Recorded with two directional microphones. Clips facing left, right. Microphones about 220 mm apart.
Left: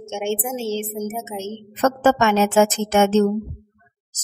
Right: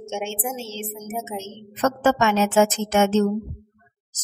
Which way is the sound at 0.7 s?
60° left (ahead or behind).